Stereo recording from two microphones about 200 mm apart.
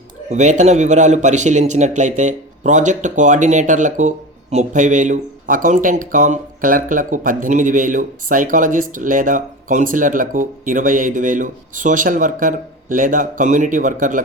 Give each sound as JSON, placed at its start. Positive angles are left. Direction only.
{"t": 0.3, "sound": "a man's voice", "side_deg": -35}